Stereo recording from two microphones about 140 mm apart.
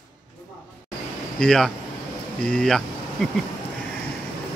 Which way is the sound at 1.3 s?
5° left (ahead or behind).